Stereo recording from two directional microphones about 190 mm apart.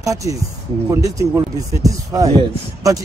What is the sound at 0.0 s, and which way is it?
Speech, 15° right (ahead or behind).